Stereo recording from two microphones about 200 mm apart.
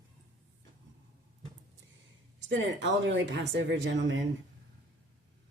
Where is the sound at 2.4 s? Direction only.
65° right (ahead or behind).